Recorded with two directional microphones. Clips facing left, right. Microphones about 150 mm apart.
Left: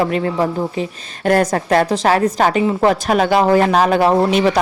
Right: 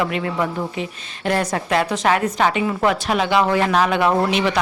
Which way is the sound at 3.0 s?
45° left (ahead or behind).